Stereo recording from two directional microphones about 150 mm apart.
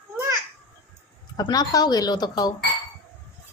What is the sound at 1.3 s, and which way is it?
Speech, 25° left (ahead or behind).